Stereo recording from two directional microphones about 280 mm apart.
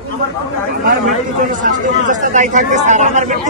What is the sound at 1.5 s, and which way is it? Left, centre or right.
Speech, right.